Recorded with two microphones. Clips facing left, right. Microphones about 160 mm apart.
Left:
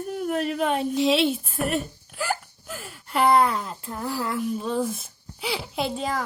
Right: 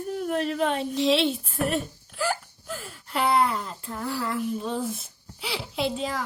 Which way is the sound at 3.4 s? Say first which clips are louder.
Left 2 dB; 45° left (ahead or behind).